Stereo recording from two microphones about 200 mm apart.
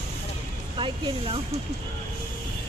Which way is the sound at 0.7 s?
25° right (ahead or behind).